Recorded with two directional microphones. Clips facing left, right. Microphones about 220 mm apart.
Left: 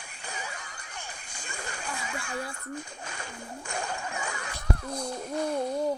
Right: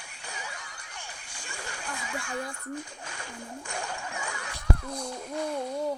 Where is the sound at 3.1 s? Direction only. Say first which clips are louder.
Even; 40° left (ahead or behind).